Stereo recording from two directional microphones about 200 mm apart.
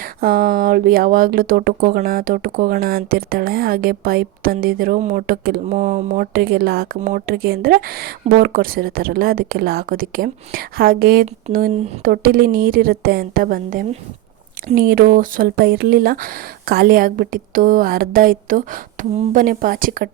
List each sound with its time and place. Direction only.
0.0 s speech: 45° right (ahead or behind)